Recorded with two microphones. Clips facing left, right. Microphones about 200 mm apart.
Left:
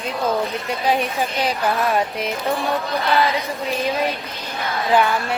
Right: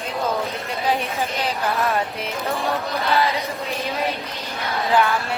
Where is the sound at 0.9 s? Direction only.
15° left (ahead or behind).